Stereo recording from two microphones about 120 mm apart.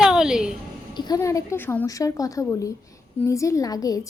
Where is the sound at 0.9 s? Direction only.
35° left (ahead or behind); by 1.8 s 20° left (ahead or behind).